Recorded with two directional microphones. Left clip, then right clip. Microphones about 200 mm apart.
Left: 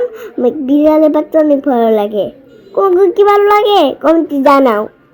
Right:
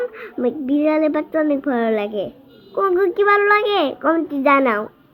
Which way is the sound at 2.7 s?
30° left (ahead or behind).